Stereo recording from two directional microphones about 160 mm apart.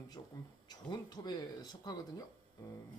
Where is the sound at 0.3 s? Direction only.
25° left (ahead or behind).